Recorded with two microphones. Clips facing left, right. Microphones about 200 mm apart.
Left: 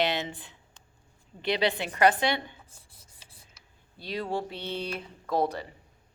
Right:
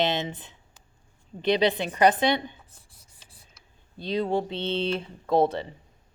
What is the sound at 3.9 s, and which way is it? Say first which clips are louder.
A woman's voice: right 6 dB; 20° right (ahead or behind).